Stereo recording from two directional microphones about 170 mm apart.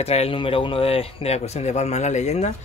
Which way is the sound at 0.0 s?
35° left (ahead or behind).